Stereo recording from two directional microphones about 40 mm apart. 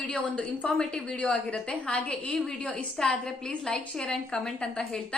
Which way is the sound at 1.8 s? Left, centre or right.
Left.